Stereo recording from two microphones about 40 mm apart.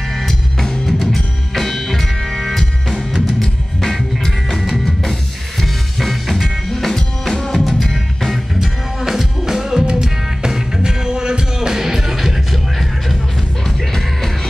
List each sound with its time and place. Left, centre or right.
0.3 s music: centre
4.6 s drum kit: centre
5.6 s music: centre
7.9 s music: centre
13.7 s music: centre